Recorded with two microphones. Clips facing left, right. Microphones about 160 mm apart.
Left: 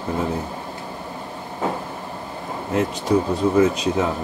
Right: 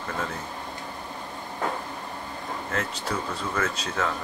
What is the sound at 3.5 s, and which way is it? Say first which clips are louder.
Speech: left 10 dB; 15° left (ahead or behind).